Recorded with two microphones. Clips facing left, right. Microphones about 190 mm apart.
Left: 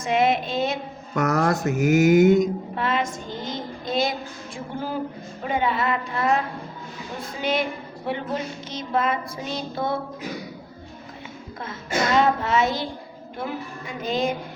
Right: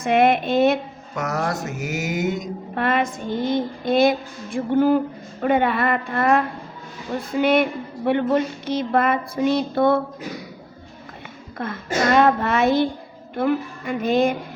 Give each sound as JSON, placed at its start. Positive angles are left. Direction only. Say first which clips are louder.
{"t": 0.0, "sound": "a woman's voice", "louder": "right 4 dB", "side_deg": -60}
{"t": 1.1, "sound": "speech", "louder": "left 3 dB", "side_deg": 50}
{"t": 2.7, "sound": "a woman's voice", "louder": "right 8 dB", "side_deg": -60}
{"t": 11.6, "sound": "a woman's voice", "louder": "right 4 dB", "side_deg": -60}